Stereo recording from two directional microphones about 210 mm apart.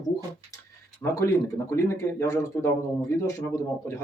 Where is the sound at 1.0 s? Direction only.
15° left (ahead or behind).